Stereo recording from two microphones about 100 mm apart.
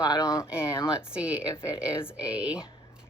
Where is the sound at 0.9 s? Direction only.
10° right (ahead or behind).